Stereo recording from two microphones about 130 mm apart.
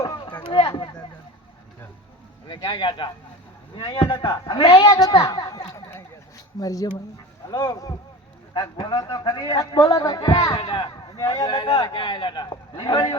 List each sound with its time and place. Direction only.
0.0 s a sound: 35° left (ahead or behind)
0.4 s speech: 40° left (ahead or behind)
2.5 s speech: 35° left (ahead or behind)